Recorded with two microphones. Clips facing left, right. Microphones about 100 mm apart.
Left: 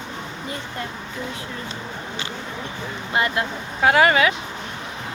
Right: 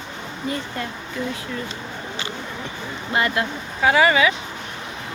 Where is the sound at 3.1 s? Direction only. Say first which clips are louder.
Right 1 dB; 20° left (ahead or behind).